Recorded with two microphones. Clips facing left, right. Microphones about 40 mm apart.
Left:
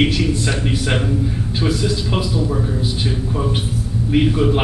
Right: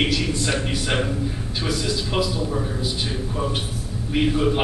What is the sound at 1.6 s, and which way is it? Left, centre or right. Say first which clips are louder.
Speech: left 5 dB; centre.